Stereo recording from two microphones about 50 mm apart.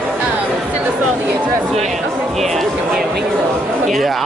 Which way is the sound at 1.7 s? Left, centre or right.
Centre.